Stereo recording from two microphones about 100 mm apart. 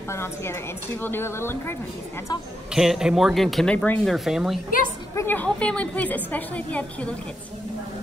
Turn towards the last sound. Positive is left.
turn(degrees=15)  # may be behind; listen again after turning